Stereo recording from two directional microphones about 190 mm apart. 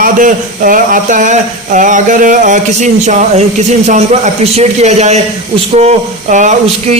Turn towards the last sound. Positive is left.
turn(degrees=-40)  # may be behind; listen again after turning